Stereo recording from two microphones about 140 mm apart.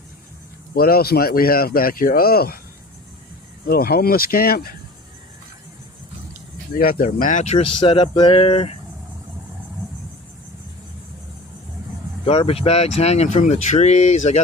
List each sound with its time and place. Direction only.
0.8 s speech: 90° left
3.7 s speech: 90° left
6.7 s speech: 90° left; by 7.7 s 50° left (ahead or behind)
7.9 s speech: 35° left (ahead or behind)
12.2 s speech: 45° left (ahead or behind)